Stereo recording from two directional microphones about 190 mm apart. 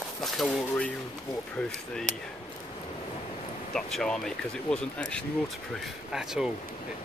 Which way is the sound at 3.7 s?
5° left (ahead or behind).